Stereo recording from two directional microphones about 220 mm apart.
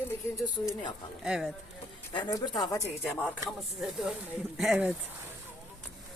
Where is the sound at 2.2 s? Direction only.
15° left (ahead or behind).